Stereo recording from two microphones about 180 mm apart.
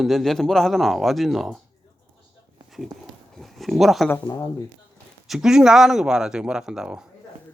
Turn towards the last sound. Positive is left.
turn(degrees=-5)  # may be behind; listen again after turning